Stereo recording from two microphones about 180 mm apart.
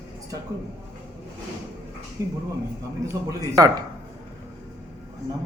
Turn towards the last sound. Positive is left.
turn(degrees=-20)  # may be behind; listen again after turning